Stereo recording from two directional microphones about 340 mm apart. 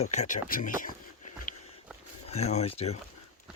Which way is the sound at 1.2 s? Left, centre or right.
Left.